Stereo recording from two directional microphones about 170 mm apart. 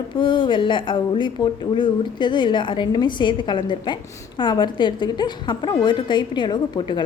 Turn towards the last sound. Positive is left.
turn(degrees=25)  # may be behind; listen again after turning